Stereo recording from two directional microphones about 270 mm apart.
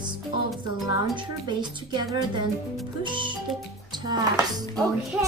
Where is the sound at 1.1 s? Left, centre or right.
Centre.